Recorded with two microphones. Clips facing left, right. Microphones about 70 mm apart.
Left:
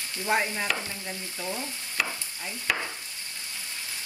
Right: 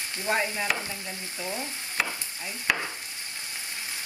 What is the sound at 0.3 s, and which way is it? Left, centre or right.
Speech, centre.